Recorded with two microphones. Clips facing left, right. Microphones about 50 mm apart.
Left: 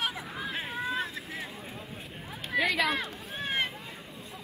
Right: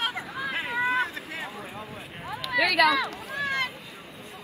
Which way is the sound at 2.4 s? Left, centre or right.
Right.